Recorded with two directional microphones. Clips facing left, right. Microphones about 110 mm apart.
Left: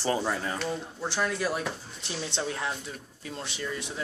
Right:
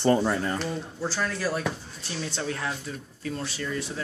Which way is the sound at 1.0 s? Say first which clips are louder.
Even; 15° left (ahead or behind).